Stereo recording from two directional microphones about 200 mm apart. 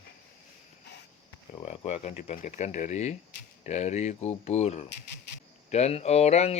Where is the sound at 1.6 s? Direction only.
35° left (ahead or behind).